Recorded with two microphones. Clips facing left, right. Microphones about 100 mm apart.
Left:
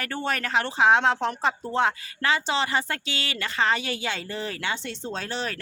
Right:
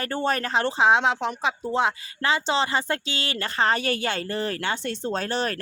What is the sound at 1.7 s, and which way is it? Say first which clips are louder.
Speech: even; 20° right (ahead or behind).